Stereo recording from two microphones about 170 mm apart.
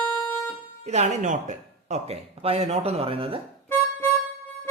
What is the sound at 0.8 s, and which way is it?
Speech, 40° right (ahead or behind).